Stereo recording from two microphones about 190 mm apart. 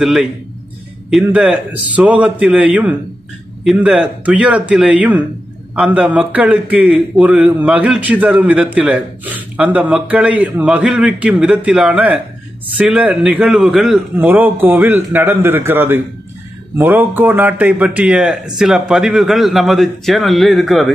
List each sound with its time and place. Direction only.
0.0 s a man's voice: centre (ahead or behind)